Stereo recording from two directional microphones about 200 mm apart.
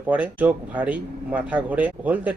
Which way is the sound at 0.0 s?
10° right (ahead or behind).